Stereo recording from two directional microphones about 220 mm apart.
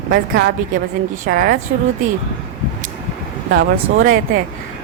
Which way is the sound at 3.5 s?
55° right (ahead or behind).